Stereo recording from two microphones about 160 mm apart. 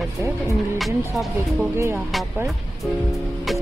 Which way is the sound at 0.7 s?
Centre (ahead or behind).